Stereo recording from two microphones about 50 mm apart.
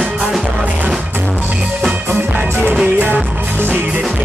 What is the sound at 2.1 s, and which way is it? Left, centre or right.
Music, right.